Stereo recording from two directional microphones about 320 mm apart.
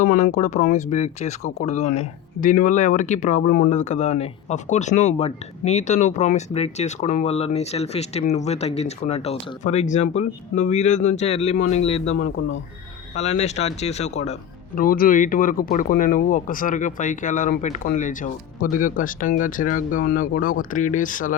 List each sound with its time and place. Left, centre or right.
0.0 s speech: left
1.4 s speech: left
1.6 s speech: left
12.0 s speech: left
13.1 s speech: left